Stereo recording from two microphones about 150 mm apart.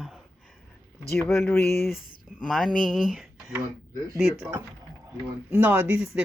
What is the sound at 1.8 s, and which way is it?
Speech, centre (ahead or behind).